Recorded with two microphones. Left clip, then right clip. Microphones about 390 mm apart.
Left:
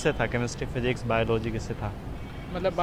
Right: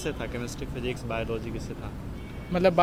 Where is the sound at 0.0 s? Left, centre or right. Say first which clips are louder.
Left 7 dB; left.